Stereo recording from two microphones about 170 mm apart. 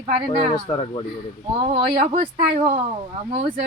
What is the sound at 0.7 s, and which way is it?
Speech, 35° left (ahead or behind).